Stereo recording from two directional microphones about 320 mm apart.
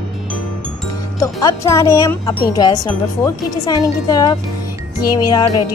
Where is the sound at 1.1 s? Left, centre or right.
Centre.